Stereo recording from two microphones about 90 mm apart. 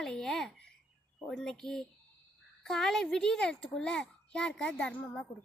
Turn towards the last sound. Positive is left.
turn(degrees=15)  # may be behind; listen again after turning